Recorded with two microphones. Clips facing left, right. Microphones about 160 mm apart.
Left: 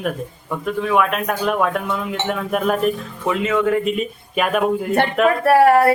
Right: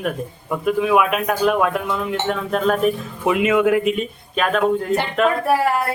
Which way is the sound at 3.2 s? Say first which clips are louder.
Right 3 dB; 15° right (ahead or behind).